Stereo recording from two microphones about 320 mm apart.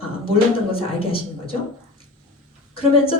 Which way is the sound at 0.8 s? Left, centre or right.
Centre.